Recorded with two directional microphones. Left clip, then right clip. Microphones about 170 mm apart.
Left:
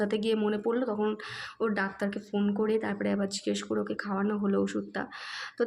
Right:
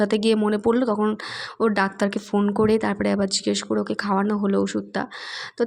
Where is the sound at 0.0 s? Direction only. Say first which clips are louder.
Right 8 dB; 40° right (ahead or behind).